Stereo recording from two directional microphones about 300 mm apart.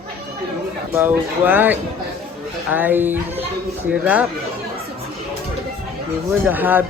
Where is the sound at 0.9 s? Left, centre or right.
Centre.